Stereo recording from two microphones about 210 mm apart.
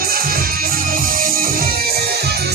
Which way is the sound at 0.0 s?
45° right (ahead or behind).